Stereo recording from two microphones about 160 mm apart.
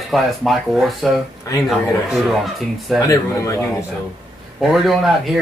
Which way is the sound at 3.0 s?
20° left (ahead or behind).